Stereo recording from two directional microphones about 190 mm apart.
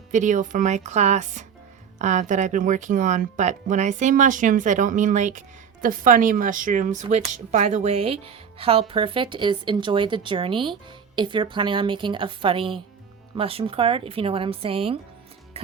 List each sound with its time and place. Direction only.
0.1 s speech: 40° right (ahead or behind)
15.6 s music: 30° right (ahead or behind)